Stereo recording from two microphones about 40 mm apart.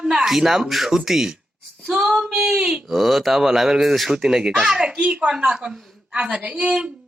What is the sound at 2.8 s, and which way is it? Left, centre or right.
Speech, centre.